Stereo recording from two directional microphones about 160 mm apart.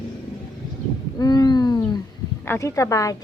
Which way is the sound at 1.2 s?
25° left (ahead or behind).